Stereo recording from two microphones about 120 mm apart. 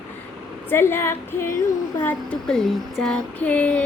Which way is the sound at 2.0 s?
15° left (ahead or behind).